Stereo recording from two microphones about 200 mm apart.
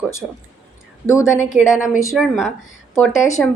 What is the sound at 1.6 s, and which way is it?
Speech, 5° right (ahead or behind).